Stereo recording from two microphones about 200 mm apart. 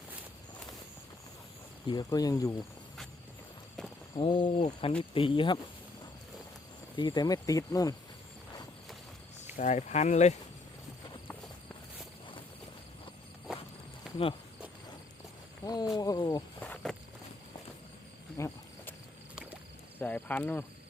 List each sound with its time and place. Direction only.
1.9 s speech: 20° left (ahead or behind)
4.1 s speech: 25° left (ahead or behind)
6.9 s speech: 20° left (ahead or behind)
9.6 s speech: 35° left (ahead or behind)
14.0 s cricket: centre (ahead or behind)
15.6 s speech: 20° left (ahead or behind)
16.6 s a sound: 5° left (ahead or behind)
18.3 s cricket: 15° left (ahead or behind)
20.0 s speech: 10° left (ahead or behind)